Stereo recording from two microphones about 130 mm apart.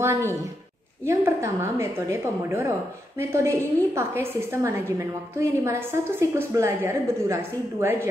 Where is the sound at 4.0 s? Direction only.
20° right (ahead or behind).